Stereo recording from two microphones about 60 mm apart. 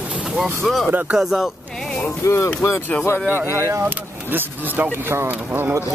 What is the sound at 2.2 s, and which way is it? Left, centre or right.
Speech, left.